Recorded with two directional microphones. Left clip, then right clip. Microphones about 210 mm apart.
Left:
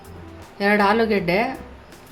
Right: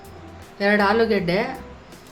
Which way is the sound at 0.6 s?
10° left (ahead or behind).